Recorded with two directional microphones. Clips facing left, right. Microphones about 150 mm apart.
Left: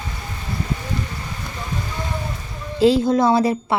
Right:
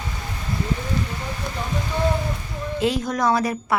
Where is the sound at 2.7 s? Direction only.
30° left (ahead or behind).